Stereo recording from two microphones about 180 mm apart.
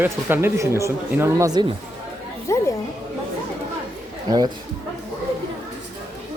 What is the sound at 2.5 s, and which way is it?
Speech, 15° left (ahead or behind).